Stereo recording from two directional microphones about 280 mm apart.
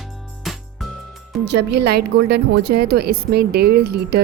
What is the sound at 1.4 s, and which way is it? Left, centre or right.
A woman's voice, right.